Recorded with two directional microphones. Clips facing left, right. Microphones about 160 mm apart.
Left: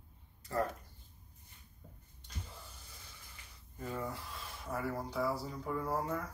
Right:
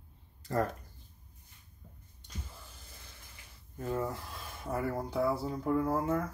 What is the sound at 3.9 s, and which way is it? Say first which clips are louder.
Speech: right 4 dB; 45° right (ahead or behind).